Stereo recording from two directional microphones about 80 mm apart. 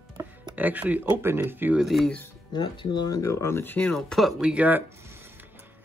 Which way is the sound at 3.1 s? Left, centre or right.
Left.